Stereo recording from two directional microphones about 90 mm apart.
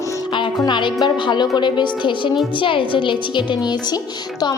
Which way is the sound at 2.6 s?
70° left (ahead or behind).